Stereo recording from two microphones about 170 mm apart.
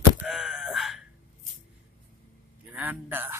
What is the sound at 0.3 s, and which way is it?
Wail, centre (ahead or behind).